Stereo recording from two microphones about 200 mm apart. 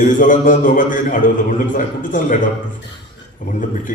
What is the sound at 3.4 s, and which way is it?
Speech, 40° left (ahead or behind).